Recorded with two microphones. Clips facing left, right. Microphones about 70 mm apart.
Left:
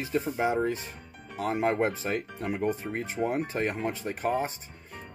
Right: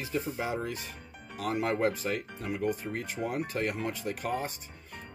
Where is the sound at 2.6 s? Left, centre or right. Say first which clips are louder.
Left 1 dB; left.